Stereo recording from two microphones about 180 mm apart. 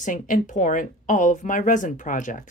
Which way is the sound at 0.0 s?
45° left (ahead or behind).